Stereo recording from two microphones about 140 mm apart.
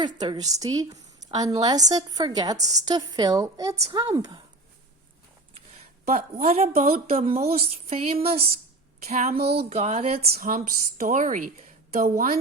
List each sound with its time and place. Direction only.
0.0 s speech: 30° right (ahead or behind)
6.1 s a woman's voice: 50° right (ahead or behind)
10.3 s a woman's voice: 85° right